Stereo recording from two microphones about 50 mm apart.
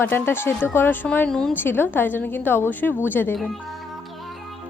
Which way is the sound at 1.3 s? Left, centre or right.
Centre.